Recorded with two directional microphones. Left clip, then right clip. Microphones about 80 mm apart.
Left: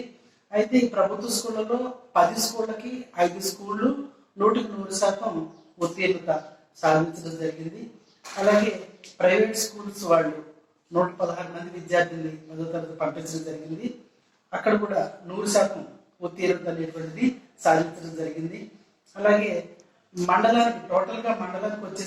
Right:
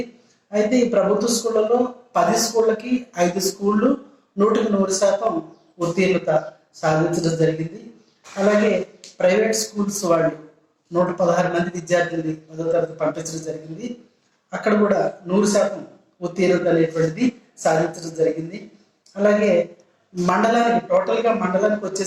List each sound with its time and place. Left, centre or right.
0.5 s a man's voice: right